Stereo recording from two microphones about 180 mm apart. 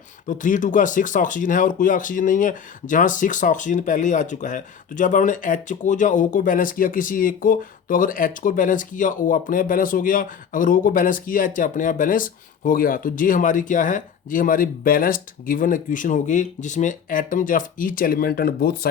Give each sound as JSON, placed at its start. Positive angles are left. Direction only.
{"t": 0.3, "sound": "speech", "side_deg": 45}